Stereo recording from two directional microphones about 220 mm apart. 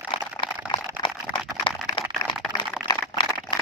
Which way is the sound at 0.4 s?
20° left (ahead or behind).